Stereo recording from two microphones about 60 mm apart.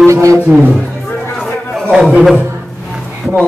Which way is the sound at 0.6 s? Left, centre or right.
Left.